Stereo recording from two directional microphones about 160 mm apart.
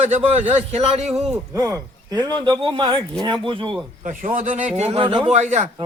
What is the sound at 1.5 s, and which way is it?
Speech, 20° right (ahead or behind).